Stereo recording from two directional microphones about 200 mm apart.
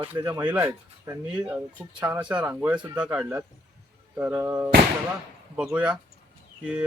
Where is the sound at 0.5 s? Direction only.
10° right (ahead or behind).